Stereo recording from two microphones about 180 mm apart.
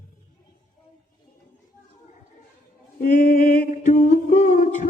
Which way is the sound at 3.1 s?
45° left (ahead or behind).